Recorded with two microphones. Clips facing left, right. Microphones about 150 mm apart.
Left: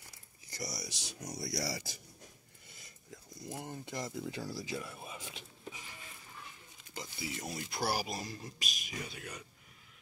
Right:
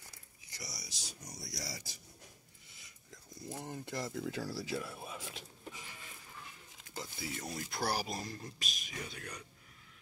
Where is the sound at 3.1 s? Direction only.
10° left (ahead or behind).